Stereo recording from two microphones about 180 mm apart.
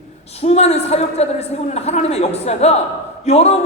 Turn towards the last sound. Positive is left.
turn(degrees=35)  # may be behind; listen again after turning